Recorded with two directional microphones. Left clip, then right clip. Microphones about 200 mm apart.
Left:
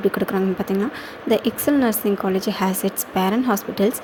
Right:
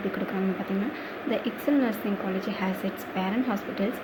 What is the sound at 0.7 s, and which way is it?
Speech, 60° left (ahead or behind).